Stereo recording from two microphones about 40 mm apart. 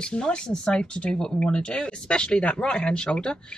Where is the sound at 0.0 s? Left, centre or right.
Left.